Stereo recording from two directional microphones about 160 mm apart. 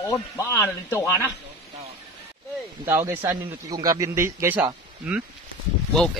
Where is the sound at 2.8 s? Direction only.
15° right (ahead or behind).